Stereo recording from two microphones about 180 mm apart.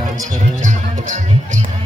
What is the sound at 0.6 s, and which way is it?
Music, 45° right (ahead or behind).